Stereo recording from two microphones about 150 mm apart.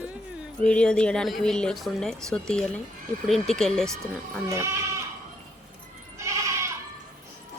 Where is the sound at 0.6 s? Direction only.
5° left (ahead or behind).